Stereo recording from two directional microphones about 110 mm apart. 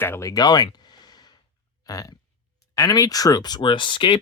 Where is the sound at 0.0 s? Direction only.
25° left (ahead or behind).